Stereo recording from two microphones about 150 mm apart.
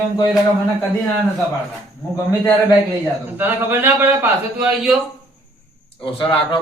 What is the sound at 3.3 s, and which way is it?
Speech, 15° right (ahead or behind).